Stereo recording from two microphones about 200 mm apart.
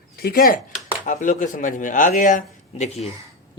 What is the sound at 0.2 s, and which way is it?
Speech, 50° left (ahead or behind).